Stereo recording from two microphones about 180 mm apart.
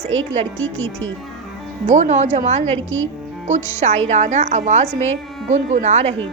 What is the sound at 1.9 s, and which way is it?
A woman's voice, 40° right (ahead or behind).